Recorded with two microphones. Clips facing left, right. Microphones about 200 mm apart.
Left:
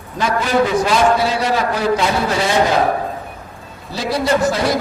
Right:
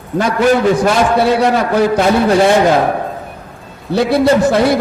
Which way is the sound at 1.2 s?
60° right (ahead or behind).